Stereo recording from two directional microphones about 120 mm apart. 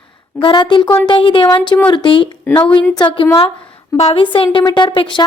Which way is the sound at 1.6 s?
10° left (ahead or behind).